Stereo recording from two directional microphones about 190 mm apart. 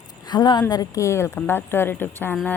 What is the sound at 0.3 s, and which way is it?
A woman's voice, 20° left (ahead or behind).